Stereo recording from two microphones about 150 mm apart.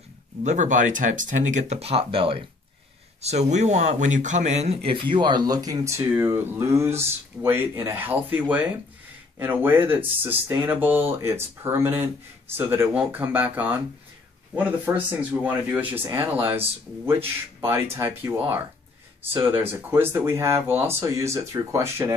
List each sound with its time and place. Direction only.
0.4 s speech: 50° right (ahead or behind); by 22.1 s 15° right (ahead or behind)